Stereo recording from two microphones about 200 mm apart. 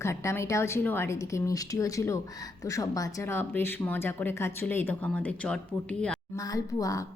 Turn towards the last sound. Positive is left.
turn(degrees=15)  # may be behind; listen again after turning